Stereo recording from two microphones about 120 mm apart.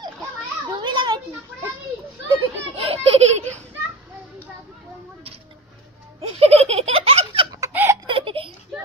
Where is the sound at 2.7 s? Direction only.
55° right (ahead or behind).